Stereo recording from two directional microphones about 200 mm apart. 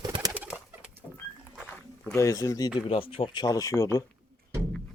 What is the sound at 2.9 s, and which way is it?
Speech, 25° left (ahead or behind).